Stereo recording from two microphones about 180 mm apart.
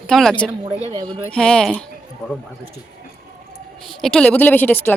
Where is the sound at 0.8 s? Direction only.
25° right (ahead or behind).